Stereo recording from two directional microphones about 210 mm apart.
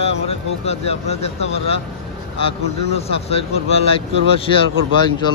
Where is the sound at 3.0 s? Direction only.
30° left (ahead or behind).